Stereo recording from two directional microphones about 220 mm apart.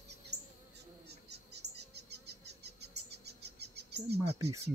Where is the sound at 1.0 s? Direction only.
50° right (ahead or behind).